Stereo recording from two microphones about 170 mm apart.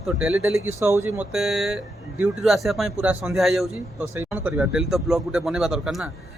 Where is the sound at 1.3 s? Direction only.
Centre (ahead or behind).